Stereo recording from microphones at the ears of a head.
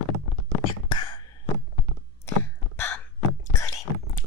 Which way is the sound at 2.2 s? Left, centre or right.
Left.